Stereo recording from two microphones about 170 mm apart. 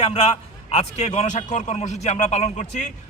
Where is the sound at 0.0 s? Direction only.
40° left (ahead or behind).